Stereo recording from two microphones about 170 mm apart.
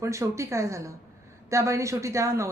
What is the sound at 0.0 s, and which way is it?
A woman's voice, 15° right (ahead or behind).